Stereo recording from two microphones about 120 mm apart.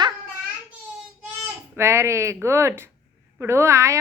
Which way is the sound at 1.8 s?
20° right (ahead or behind).